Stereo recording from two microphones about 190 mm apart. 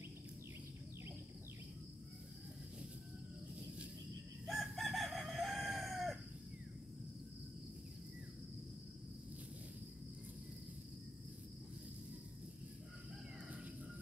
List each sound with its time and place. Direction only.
4.5 s chicken: centre (ahead or behind)